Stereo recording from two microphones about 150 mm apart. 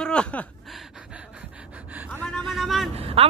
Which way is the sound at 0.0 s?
5° left (ahead or behind).